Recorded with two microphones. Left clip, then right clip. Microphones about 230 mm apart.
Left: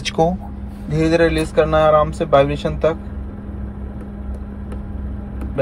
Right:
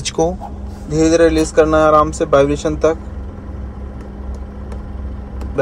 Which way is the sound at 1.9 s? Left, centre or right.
Centre.